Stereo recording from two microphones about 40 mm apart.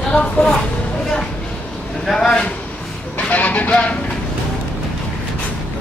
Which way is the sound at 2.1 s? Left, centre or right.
Centre.